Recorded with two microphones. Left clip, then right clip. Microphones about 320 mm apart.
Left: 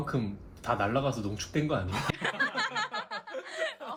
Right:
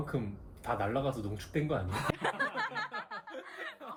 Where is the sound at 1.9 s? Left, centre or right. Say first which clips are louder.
Left 2 dB; centre.